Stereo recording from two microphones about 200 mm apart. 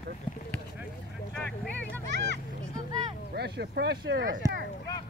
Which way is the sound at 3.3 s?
55° right (ahead or behind).